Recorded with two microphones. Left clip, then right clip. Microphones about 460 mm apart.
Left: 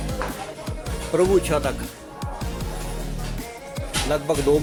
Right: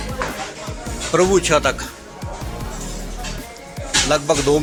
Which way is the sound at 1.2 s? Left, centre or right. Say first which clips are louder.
Right 4 dB; left.